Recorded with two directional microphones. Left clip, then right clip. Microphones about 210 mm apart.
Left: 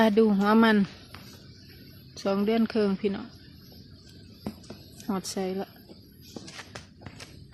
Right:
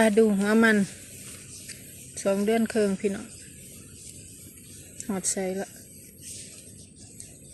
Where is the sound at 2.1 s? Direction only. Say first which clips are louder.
Right 2 dB; 10° left (ahead or behind).